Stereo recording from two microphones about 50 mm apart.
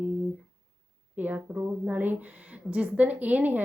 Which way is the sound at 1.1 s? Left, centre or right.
Right.